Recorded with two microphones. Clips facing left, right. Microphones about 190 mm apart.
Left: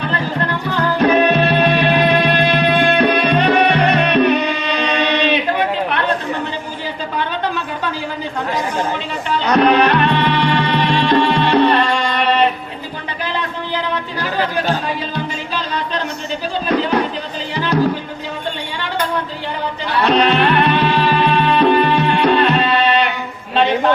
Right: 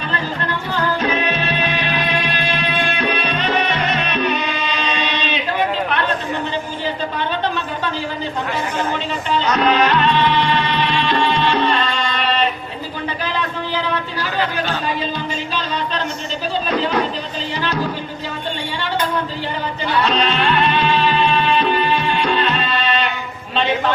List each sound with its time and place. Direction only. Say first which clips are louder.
0.9 s music: left 7 dB; 60° left (ahead or behind)
9.6 s music: left 5 dB; 60° left (ahead or behind)
16.6 s a sound: left 4 dB; 60° left (ahead or behind)
20.0 s music: left 5 dB; 60° left (ahead or behind)